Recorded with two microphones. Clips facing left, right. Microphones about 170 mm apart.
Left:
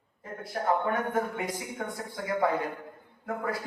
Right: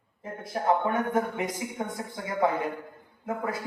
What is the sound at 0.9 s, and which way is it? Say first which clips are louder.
A man's voice: right 2 dB; 20° right (ahead or behind).